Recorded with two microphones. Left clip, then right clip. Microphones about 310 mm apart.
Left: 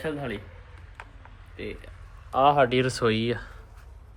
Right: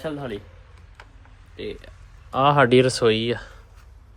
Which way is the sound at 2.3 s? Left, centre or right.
Right.